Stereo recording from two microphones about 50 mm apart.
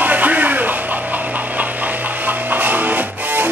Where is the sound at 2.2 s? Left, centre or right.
Right.